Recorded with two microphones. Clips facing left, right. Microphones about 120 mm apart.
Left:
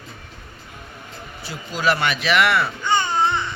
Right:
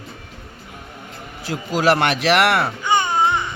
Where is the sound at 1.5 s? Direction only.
85° right.